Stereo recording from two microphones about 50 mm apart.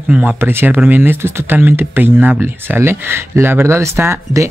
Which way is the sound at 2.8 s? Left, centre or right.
Right.